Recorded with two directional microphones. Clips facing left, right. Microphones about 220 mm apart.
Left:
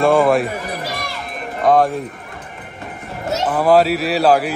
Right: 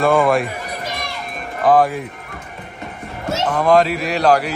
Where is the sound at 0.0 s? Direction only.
Centre (ahead or behind).